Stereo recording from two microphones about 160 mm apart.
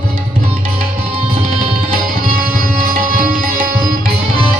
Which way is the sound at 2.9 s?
60° right (ahead or behind).